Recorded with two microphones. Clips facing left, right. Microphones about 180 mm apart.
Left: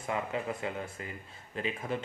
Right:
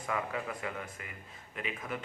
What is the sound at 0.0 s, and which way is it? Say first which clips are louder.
Speech: left 2 dB; 25° left (ahead or behind).